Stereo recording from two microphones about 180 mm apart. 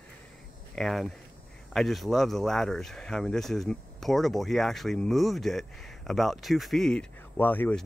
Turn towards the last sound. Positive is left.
turn(degrees=10)  # may be behind; listen again after turning